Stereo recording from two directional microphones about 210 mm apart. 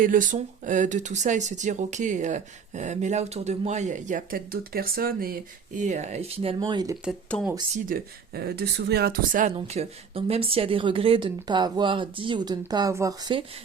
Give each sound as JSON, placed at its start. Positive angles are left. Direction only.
{"t": 0.0, "sound": "speech", "side_deg": -40}
{"t": 7.0, "sound": "speech", "side_deg": 0}
{"t": 7.9, "sound": "speech", "side_deg": -45}
{"t": 9.6, "sound": "speech", "side_deg": -25}